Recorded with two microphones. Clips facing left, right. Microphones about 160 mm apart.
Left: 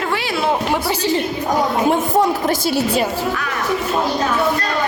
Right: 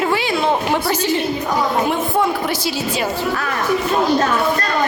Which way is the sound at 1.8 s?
40° left (ahead or behind).